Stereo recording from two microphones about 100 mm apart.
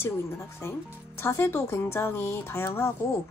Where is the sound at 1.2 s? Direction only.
25° left (ahead or behind).